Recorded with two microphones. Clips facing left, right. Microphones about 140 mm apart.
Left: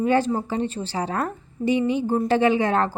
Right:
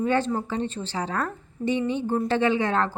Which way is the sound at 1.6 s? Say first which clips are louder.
Left 4 dB; 10° left (ahead or behind).